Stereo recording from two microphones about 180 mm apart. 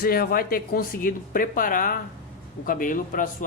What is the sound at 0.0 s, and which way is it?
Speech, 55° left (ahead or behind).